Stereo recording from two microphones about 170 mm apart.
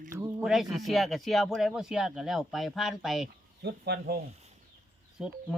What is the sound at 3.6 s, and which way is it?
Speech, 70° right (ahead or behind).